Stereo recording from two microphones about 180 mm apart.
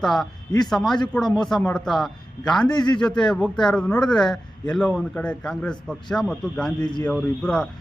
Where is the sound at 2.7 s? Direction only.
25° left (ahead or behind).